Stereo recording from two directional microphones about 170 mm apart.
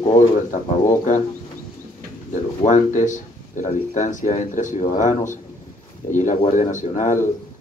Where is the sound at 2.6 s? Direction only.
45° left (ahead or behind).